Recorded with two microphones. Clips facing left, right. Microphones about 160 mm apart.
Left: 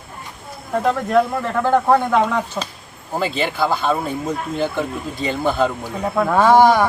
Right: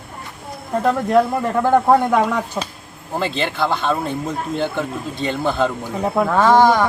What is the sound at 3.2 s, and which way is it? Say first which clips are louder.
Speech: left 1 dB; 5° left (ahead or behind).